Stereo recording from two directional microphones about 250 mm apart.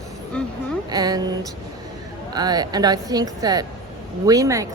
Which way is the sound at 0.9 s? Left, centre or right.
Centre.